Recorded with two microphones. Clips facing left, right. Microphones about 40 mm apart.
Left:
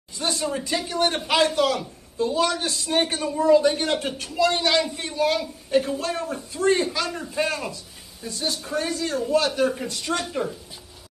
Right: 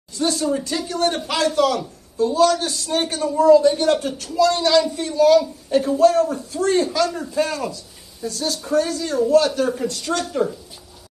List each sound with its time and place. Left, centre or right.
0.4 s a man's voice: centre